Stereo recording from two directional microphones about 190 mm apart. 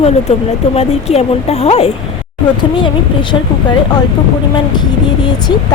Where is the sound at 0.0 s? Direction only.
35° left (ahead or behind).